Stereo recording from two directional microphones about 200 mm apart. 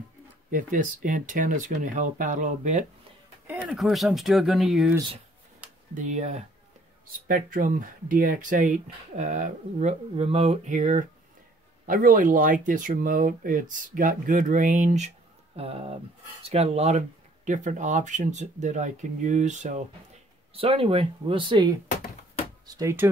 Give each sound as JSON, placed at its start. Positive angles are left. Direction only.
{"t": 0.5, "sound": "speech", "side_deg": -40}
{"t": 3.4, "sound": "speech", "side_deg": -5}
{"t": 5.9, "sound": "a man's voice", "side_deg": -35}